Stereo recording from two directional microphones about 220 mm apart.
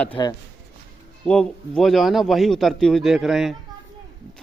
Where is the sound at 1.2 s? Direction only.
Centre (ahead or behind).